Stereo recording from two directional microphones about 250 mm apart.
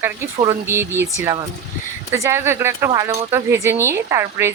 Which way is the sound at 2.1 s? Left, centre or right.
Centre.